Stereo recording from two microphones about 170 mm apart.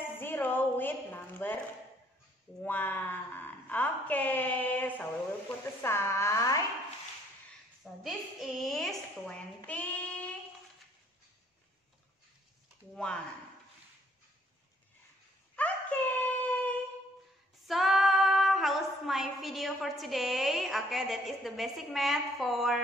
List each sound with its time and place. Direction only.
0.2 s a sound: 10° left (ahead or behind)
2.6 s a woman's voice: 10° left (ahead or behind)
7.8 s a woman's voice: centre (ahead or behind)
9.7 s child singing: 10° left (ahead or behind)
12.9 s a woman's voice: 5° left (ahead or behind)
15.5 s a sound: 10° left (ahead or behind)
17.6 s a woman's voice: centre (ahead or behind)